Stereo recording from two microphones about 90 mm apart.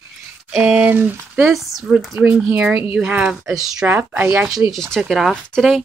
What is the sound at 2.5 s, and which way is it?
Speech, 15° right (ahead or behind).